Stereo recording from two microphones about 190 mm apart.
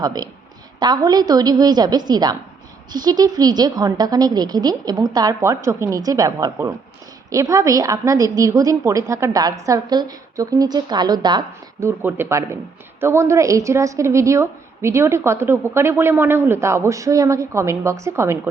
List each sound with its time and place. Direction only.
0.0 s a woman's voice: 20° right (ahead or behind)